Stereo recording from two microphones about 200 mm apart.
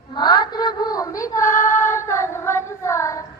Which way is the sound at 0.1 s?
20° left (ahead or behind).